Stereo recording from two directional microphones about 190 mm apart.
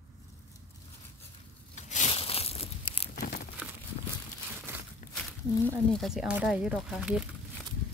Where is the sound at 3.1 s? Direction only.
55° left (ahead or behind).